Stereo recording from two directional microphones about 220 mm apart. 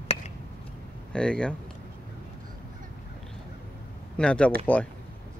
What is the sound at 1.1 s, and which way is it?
Speech, 5° left (ahead or behind).